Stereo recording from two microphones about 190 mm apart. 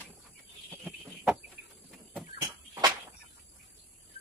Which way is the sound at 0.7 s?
5° right (ahead or behind).